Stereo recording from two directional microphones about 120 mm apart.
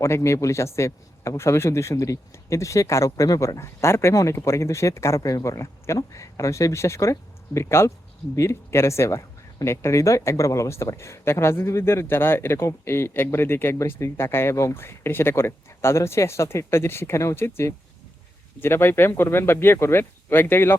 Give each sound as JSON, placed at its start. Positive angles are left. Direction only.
{"t": 0.0, "sound": "speech", "side_deg": 25}